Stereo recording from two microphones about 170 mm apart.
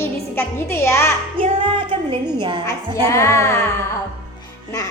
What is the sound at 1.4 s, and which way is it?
Speech, 30° right (ahead or behind).